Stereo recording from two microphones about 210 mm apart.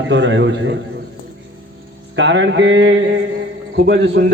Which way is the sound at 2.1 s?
60° right (ahead or behind).